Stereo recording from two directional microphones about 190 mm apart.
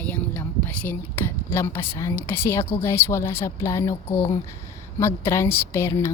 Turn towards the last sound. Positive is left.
turn(degrees=15)  # may be behind; listen again after turning